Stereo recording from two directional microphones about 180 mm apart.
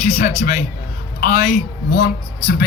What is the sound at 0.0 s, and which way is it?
Speech, 45° left (ahead or behind).